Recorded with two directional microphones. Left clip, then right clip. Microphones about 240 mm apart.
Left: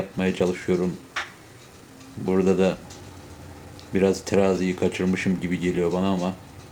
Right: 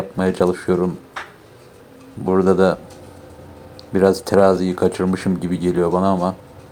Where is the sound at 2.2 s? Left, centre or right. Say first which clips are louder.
Right 6 dB; centre.